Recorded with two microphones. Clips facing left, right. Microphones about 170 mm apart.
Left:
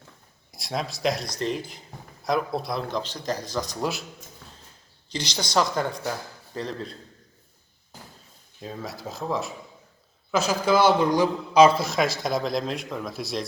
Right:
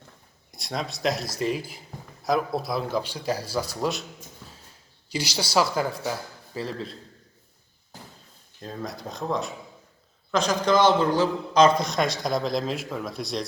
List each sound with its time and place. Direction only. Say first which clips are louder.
0.5 s a man's voice: left 1 dB; centre (ahead or behind)
5.0 s a man's voice: right 2 dB; 10° right (ahead or behind)
8.6 s a man's voice: even; 5° left (ahead or behind)